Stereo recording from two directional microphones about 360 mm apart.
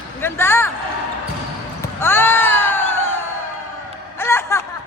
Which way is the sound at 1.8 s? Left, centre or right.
Centre.